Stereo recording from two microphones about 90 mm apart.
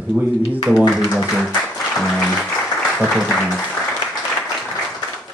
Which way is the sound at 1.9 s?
Centre (ahead or behind).